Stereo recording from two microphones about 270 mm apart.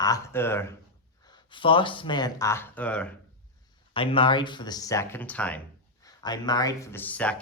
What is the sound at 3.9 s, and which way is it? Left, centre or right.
Speech, centre.